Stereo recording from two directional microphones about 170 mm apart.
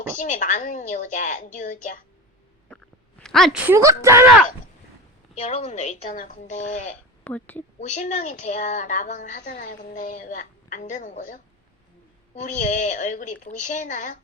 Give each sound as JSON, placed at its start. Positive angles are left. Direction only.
{"t": 0.2, "sound": "a woman's voice", "side_deg": 50}
{"t": 3.2, "sound": "a woman's voice", "side_deg": 0}
{"t": 3.7, "sound": "speech", "side_deg": -15}
{"t": 5.3, "sound": "a woman's voice", "side_deg": 40}
{"t": 7.3, "sound": "a woman's voice", "side_deg": 10}
{"t": 7.8, "sound": "a woman's voice", "side_deg": 45}